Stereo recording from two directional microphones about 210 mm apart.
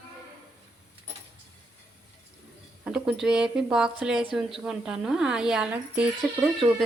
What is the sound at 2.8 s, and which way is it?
Speech, 5° right (ahead or behind).